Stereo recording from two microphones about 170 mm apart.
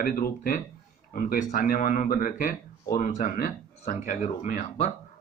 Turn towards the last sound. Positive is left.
turn(degrees=45)  # may be behind; listen again after turning